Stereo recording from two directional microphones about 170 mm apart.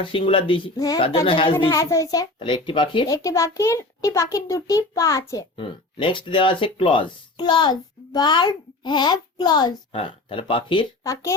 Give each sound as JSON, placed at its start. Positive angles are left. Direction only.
{"t": 0.0, "sound": "a child's voice", "side_deg": 30}
{"t": 1.6, "sound": "a child's voice", "side_deg": 20}